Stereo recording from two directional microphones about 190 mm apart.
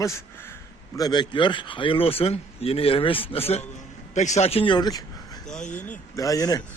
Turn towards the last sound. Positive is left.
turn(degrees=20)  # may be behind; listen again after turning